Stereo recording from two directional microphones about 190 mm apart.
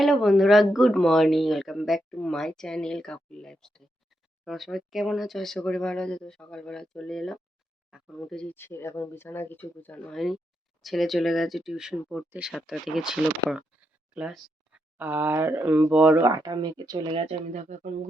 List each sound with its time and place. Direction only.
0.0 s speech: centre (ahead or behind)
16.2 s speech: 20° right (ahead or behind); by 17.9 s 40° right (ahead or behind)